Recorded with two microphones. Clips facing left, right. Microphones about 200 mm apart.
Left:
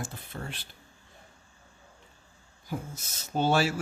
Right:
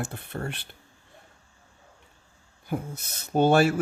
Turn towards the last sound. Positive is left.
turn(degrees=-55)  # may be behind; listen again after turning